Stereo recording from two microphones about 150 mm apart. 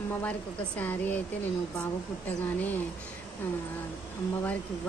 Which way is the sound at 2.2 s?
10° left (ahead or behind).